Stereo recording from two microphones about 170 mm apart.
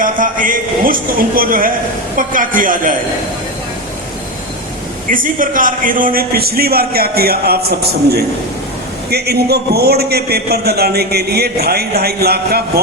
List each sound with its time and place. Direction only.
0.0 s a man's voice: 50° right (ahead or behind)
5.0 s a man's voice: 55° right (ahead or behind)